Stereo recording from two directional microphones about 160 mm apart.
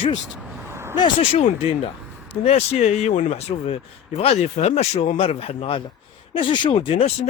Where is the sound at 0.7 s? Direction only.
15° right (ahead or behind).